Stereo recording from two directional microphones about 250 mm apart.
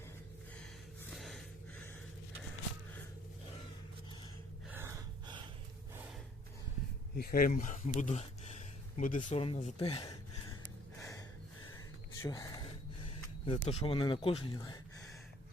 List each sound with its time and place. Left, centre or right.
4.7 s gasp: centre
7.2 s speech: left; by 10.2 s centre
11.0 s gasp: centre
12.2 s a sound: centre